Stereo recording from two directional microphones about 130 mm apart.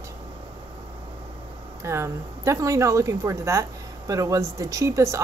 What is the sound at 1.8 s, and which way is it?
Speech, 20° right (ahead or behind).